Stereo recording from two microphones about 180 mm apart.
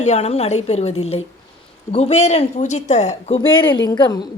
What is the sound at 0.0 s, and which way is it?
A woman's voice, 40° left (ahead or behind).